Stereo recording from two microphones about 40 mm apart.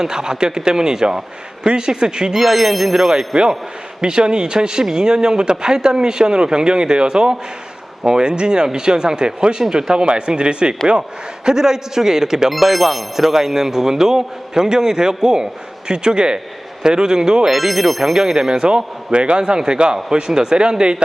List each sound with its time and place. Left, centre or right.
0.0 s a man's voice: centre
2.4 s a man's voice: centre
12.5 s a man's voice: centre
17.5 s a man's voice: centre; by 21.0 s right